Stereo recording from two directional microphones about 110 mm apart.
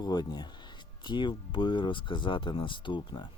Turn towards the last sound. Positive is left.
turn(degrees=45)  # may be behind; listen again after turning